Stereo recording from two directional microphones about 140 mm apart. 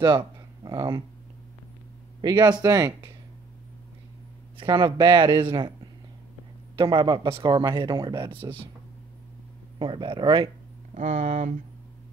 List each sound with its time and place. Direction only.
0.0 s a sound: 35° right (ahead or behind)
2.2 s speech: 30° right (ahead or behind)
4.6 s speech: 35° right (ahead or behind)
6.8 s speech: 35° right (ahead or behind)
9.8 s speech: 35° right (ahead or behind)
11.0 s speech: 60° right (ahead or behind)